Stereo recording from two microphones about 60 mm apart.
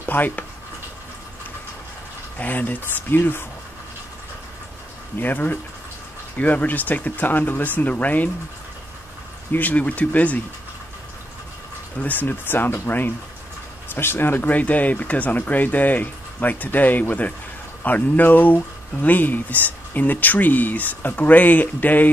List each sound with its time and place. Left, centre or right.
0.0 s speech: left
2.3 s speech: left
5.2 s speech: left
9.5 s speech: left
12.0 s speech: left